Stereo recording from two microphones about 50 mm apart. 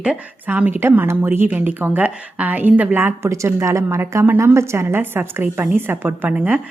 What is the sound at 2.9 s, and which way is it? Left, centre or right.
Speech, right.